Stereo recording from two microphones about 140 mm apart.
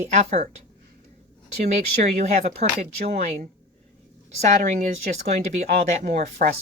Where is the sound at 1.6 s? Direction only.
55° right (ahead or behind).